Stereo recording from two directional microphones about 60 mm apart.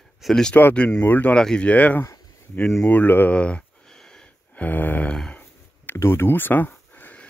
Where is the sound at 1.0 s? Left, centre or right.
Left.